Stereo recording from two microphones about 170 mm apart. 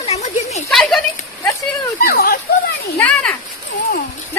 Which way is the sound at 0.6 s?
Centre (ahead or behind).